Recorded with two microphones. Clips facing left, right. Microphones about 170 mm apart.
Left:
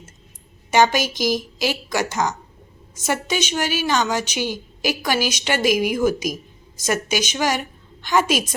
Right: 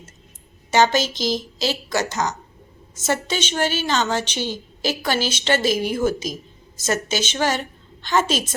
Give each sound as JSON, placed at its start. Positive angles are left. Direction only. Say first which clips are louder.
{"t": 0.7, "sound": "a woman's voice", "louder": "even", "side_deg": 15}